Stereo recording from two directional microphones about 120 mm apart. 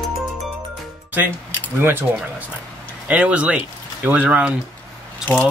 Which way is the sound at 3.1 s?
10° right (ahead or behind).